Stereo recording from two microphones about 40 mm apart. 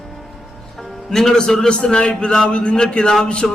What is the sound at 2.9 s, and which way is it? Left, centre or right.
Speech, centre.